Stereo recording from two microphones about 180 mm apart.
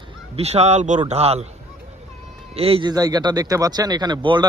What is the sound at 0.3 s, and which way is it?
Speech, 35° right (ahead or behind).